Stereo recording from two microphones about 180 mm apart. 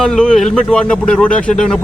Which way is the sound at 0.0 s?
5° left (ahead or behind).